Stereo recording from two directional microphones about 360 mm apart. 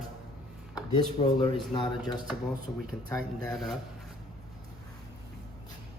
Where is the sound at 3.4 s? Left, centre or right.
Centre.